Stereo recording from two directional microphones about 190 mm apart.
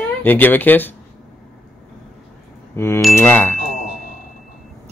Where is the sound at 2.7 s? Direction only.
15° left (ahead or behind).